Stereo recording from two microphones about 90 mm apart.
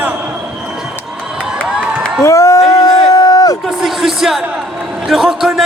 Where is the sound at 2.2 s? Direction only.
35° left (ahead or behind).